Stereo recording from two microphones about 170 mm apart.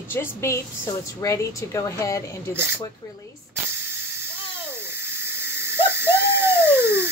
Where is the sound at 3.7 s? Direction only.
15° right (ahead or behind).